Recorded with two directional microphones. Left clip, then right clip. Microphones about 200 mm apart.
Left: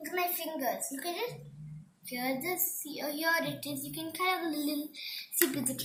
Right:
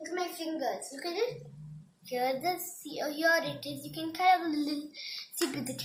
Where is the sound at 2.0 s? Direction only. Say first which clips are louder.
Right 4 dB; 45° right (ahead or behind).